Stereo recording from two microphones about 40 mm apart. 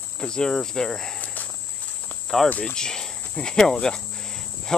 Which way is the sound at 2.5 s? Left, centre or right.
Left.